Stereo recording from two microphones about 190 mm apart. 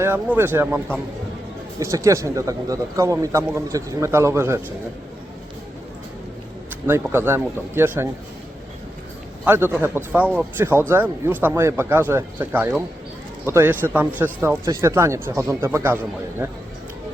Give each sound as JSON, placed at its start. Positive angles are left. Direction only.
{"t": 0.0, "sound": "speech", "side_deg": -10}
{"t": 1.8, "sound": "speech", "side_deg": -15}
{"t": 6.8, "sound": "speech", "side_deg": -10}
{"t": 9.4, "sound": "speech", "side_deg": -10}